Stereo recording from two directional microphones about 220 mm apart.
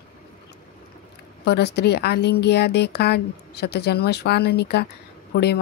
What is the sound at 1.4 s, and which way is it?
Speech, 50° left (ahead or behind).